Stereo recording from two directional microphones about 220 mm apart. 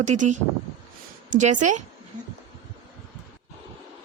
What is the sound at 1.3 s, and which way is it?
Speech, 35° right (ahead or behind).